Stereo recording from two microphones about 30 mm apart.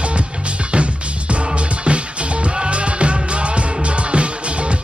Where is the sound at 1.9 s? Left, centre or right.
Right.